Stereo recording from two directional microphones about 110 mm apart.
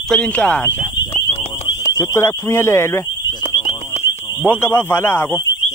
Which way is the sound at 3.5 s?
90° left.